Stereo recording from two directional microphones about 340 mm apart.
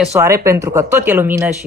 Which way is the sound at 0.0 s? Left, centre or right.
Centre.